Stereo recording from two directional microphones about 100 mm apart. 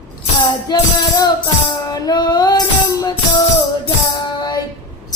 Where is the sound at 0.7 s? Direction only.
40° left (ahead or behind).